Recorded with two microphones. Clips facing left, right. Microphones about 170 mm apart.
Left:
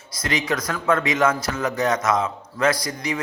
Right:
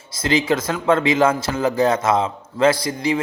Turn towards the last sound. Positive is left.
turn(degrees=-30)  # may be behind; listen again after turning